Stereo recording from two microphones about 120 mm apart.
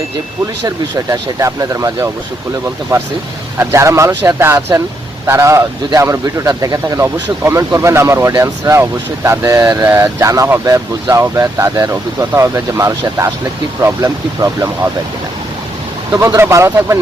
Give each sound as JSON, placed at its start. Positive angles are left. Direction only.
{"t": 0.6, "sound": "speech", "side_deg": -25}
{"t": 16.1, "sound": "speech", "side_deg": -25}